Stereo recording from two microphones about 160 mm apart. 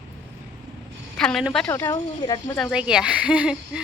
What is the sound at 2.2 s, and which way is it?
Speech, 25° left (ahead or behind).